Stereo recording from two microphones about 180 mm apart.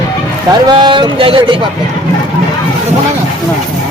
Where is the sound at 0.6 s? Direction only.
25° right (ahead or behind).